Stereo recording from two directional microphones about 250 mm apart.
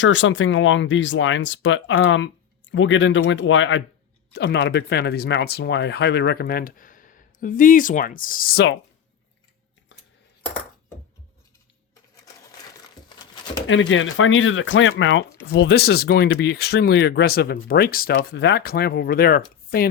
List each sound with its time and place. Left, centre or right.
0.0 s speech: left
13.1 s a sound: centre
13.7 s speech: left